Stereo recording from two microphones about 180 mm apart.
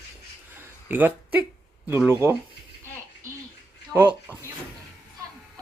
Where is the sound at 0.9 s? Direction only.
10° right (ahead or behind).